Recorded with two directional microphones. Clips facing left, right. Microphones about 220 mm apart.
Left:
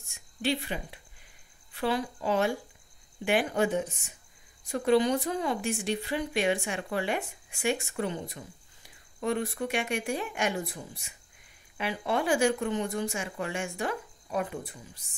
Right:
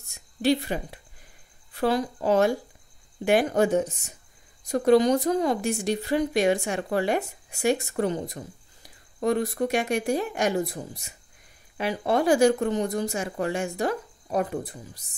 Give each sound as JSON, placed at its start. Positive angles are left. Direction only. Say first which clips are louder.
{"t": 0.1, "sound": "a woman's voice", "louder": "right 7 dB", "side_deg": -40}